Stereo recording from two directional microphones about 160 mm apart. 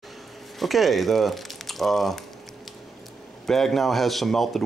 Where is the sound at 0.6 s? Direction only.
Centre (ahead or behind).